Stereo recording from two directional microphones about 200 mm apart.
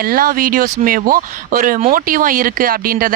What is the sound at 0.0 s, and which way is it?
Speech, 45° right (ahead or behind).